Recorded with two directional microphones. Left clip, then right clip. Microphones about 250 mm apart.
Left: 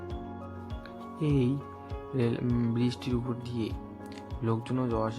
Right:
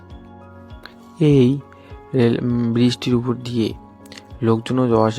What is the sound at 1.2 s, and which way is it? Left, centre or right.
Speech, right.